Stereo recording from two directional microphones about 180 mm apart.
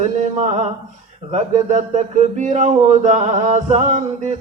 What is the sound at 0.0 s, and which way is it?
Speech, 40° right (ahead or behind).